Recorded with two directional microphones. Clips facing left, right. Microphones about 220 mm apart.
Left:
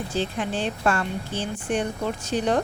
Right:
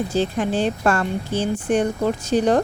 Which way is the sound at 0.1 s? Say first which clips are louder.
Right 6 dB; 40° right (ahead or behind).